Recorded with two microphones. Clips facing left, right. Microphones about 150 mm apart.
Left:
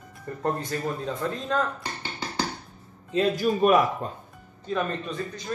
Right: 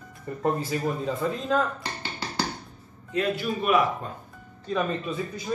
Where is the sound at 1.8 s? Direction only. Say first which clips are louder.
Even; 15° left (ahead or behind).